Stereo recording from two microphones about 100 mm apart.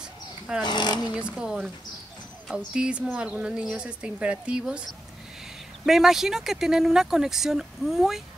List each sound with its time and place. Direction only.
0.7 s speech: 45° left (ahead or behind)
1.1 s speech: 10° right (ahead or behind)
5.9 s speech: 5° right (ahead or behind)